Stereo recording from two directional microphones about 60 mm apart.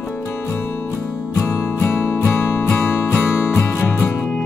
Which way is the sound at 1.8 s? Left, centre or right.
Left.